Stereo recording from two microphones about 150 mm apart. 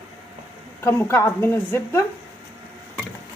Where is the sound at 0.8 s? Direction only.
15° left (ahead or behind).